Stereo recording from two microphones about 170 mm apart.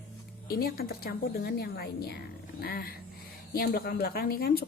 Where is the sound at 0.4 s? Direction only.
60° left (ahead or behind).